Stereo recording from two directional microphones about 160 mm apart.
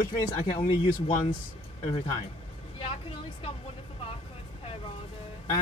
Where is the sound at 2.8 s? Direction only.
35° left (ahead or behind).